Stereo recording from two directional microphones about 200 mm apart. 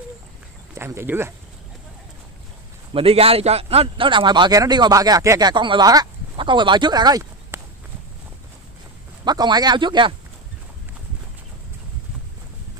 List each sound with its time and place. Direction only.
0.7 s speech: 10° right (ahead or behind)
2.9 s a man's voice: 30° right (ahead or behind)
9.2 s a man's voice: 20° right (ahead or behind)